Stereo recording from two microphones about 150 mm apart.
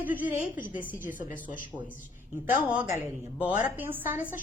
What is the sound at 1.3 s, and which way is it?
Speech, 60° left (ahead or behind).